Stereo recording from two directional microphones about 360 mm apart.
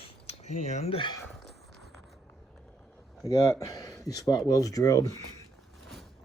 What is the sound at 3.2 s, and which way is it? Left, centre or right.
Speech, centre.